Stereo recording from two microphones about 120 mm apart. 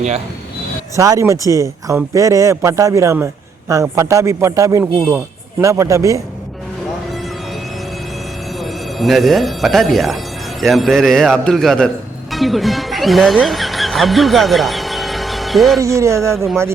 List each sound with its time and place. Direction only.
0.9 s a man's voice: 25° right (ahead or behind)
4.8 s a man's voice: 15° right (ahead or behind)
8.5 s a man's voice: centre (ahead or behind)
15.8 s a man's voice: 25° right (ahead or behind)